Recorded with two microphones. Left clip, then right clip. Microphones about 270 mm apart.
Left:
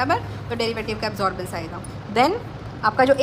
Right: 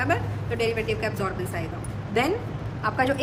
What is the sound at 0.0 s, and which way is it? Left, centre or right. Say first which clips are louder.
A woman's voice: left 4 dB; centre.